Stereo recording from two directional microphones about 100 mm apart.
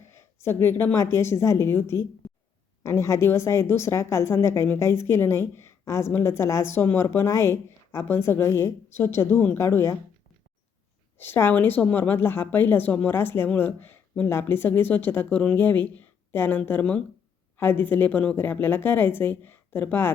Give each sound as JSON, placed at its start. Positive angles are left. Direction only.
{"t": 0.0, "sound": "a woman's voice", "side_deg": 25}
{"t": 11.2, "sound": "a woman's voice", "side_deg": 25}